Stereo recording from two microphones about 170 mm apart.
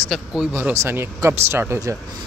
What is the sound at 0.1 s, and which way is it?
Speech, 5° right (ahead or behind).